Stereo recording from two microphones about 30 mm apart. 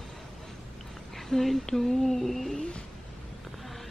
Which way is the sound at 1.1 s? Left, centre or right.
Centre.